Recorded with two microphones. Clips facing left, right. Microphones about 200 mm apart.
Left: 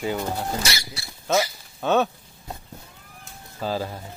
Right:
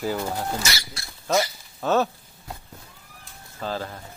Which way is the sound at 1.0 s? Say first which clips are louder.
Left 1 dB; 5° left (ahead or behind).